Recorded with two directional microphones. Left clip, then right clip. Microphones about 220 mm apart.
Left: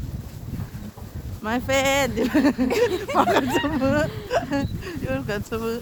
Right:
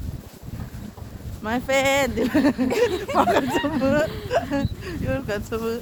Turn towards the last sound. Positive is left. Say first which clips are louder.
# right 1 dB
turn(degrees=10)  # may be behind; listen again after turning